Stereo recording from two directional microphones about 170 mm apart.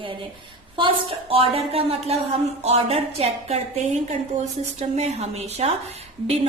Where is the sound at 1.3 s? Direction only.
35° right (ahead or behind).